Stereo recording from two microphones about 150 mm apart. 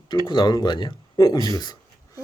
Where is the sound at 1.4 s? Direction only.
25° left (ahead or behind).